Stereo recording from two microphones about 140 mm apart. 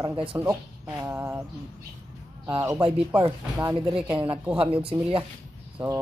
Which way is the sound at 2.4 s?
20° right (ahead or behind).